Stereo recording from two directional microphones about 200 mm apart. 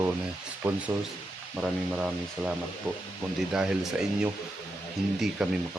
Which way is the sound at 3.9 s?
5° right (ahead or behind).